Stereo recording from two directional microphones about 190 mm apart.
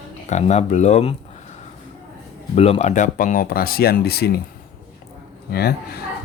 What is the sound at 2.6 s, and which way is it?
Speech, 35° left (ahead or behind).